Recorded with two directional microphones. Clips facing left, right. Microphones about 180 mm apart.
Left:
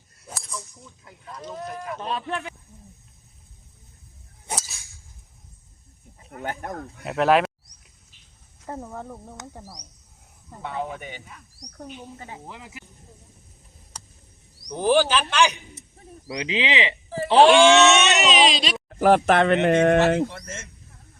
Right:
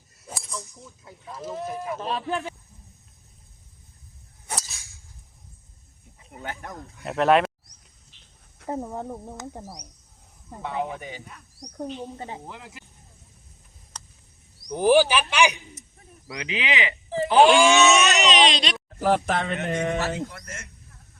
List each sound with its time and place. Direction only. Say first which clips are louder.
0.2 s a sound: even; 5° right (ahead or behind)
0.7 s speech: right 2 dB; centre (ahead or behind)
6.4 s speech: left 5 dB; 50° left (ahead or behind)
7.0 s speech: even; centre (ahead or behind)
8.6 s speech: right 4 dB; 15° right (ahead or behind)
11.0 s speech: right 1 dB; centre (ahead or behind)
11.9 s speech: right 4 dB; 30° right (ahead or behind)
12.5 s speech: even; centre (ahead or behind)
13.9 s a sound: even; 10° left (ahead or behind)
14.8 s speech: right 2 dB; 15° right (ahead or behind)
16.2 s speech: left 4 dB; 30° left (ahead or behind)
17.4 s speech: left 3 dB; centre (ahead or behind)
18.9 s speech: left 6 dB; 70° left (ahead or behind)
20.2 s speech: left 5 dB; 25° left (ahead or behind)